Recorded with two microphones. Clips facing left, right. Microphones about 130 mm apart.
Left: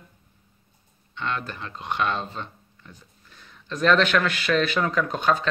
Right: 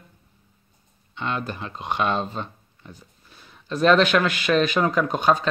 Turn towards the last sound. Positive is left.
turn(degrees=-15)  # may be behind; listen again after turning